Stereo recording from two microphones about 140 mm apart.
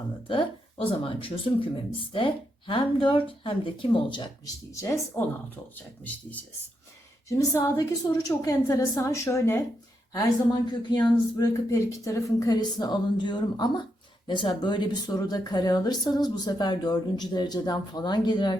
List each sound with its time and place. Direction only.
0.3 s speech: 40° left (ahead or behind)
4.7 s speech: 20° left (ahead or behind)
7.3 s speech: 20° left (ahead or behind)
11.7 s speech: 20° left (ahead or behind)